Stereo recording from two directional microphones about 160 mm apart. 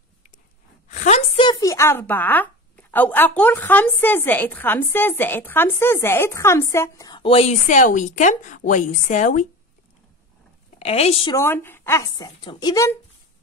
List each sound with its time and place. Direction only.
0.8 s a sound: 50° left (ahead or behind)
1.4 s speech: 25° left (ahead or behind)
7.6 s a woman's voice: 50° left (ahead or behind)
10.8 s a woman's voice: 40° left (ahead or behind)
11.3 s speech: 15° left (ahead or behind)